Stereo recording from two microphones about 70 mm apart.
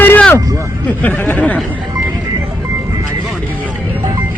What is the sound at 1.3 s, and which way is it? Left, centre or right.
Speech, left.